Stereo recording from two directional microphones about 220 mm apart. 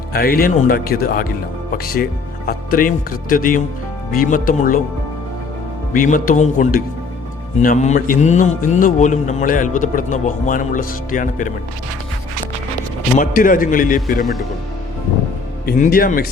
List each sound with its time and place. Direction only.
0.1 s speech: 45° left (ahead or behind)
5.9 s speech: 40° left (ahead or behind)
13.1 s speech: 35° left (ahead or behind)
15.6 s speech: 40° left (ahead or behind)